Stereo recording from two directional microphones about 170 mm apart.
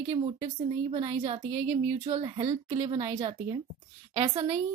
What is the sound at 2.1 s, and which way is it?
Speech, 30° right (ahead or behind).